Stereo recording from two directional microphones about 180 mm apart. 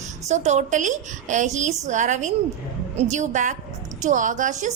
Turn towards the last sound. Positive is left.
turn(degrees=-40)  # may be behind; listen again after turning